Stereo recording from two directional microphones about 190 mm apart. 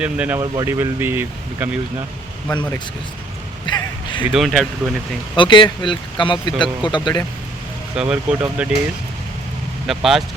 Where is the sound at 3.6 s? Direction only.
25° left (ahead or behind).